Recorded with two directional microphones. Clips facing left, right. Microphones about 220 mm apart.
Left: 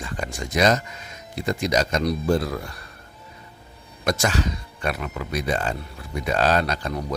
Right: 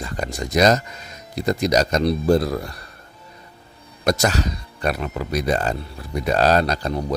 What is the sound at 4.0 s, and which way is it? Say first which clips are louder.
Speech: right 3 dB; 40° right (ahead or behind).